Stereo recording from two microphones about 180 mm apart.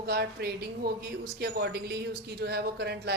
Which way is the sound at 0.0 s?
60° right (ahead or behind).